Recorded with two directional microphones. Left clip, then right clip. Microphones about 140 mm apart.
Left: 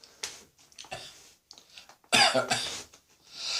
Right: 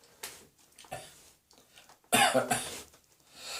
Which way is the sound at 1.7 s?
40° right (ahead or behind).